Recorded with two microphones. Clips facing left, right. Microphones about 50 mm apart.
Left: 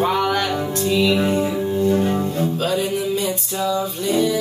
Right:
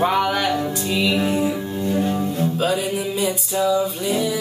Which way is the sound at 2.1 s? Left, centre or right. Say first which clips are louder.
Left 1 dB; centre.